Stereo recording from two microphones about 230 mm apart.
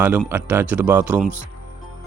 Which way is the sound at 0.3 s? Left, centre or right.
Centre.